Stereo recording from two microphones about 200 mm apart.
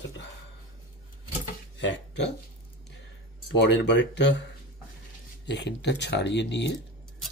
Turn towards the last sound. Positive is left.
turn(degrees=60)  # may be behind; listen again after turning